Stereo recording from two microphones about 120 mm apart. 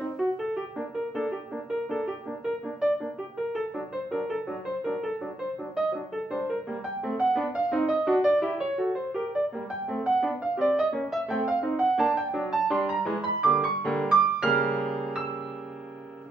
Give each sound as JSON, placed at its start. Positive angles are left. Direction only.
{"t": 0.4, "sound": "music", "side_deg": 0}
{"t": 4.1, "sound": "music", "side_deg": 0}